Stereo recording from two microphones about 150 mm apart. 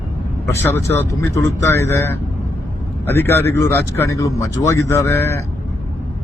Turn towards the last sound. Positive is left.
turn(degrees=15)  # may be behind; listen again after turning